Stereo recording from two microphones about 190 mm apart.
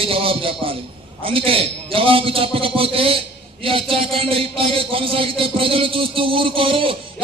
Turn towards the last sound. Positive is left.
turn(degrees=-30)  # may be behind; listen again after turning